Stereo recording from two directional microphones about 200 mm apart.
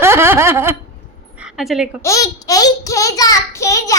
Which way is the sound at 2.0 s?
15° left (ahead or behind).